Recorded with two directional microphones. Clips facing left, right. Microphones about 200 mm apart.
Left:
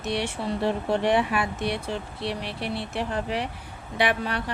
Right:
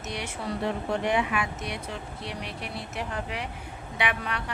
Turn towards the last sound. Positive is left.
turn(degrees=35)  # may be behind; listen again after turning